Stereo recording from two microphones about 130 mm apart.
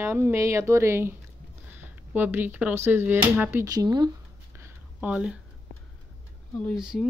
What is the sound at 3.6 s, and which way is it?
Speech, 30° right (ahead or behind).